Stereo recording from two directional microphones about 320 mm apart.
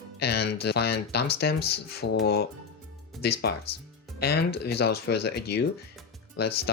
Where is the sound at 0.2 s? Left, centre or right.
Left.